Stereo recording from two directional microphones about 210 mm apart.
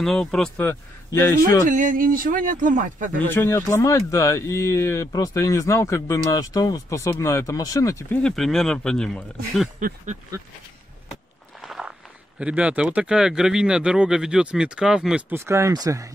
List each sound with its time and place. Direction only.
0.0 s speech: 5° left (ahead or behind)
1.7 s speech: 40° right (ahead or behind)
3.2 s speech: 10° left (ahead or behind)
8.2 s speech: 5° left (ahead or behind)
9.8 s speech: 40° right (ahead or behind)
11.6 s walk: centre (ahead or behind)
12.4 s speech: 5° right (ahead or behind)